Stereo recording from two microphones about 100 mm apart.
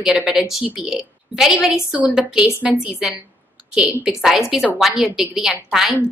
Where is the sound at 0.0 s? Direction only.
5° right (ahead or behind).